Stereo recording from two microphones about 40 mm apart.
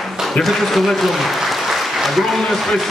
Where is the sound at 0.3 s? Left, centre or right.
Centre.